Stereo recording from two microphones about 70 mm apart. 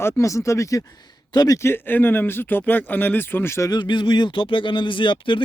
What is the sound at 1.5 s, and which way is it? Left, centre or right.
Speech, left.